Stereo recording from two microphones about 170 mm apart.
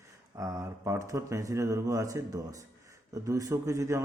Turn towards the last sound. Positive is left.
turn(degrees=-20)  # may be behind; listen again after turning